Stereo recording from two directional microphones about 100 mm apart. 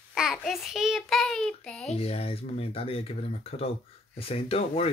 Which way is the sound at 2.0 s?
85° left.